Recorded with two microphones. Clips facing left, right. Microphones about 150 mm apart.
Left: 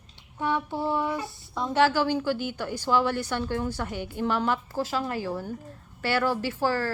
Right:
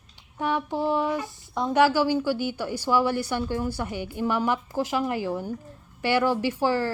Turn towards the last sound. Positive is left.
turn(degrees=-15)  # may be behind; listen again after turning